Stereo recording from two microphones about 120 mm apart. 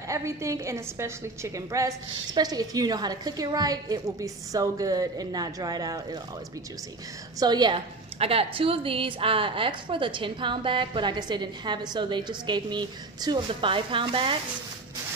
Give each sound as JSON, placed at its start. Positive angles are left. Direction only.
{"t": 0.1, "sound": "a woman's voice", "side_deg": -25}
{"t": 7.3, "sound": "a woman's voice", "side_deg": -35}
{"t": 8.2, "sound": "a woman's voice", "side_deg": -55}